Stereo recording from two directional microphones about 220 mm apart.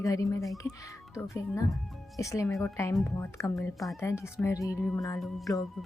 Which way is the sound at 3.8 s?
Centre (ahead or behind).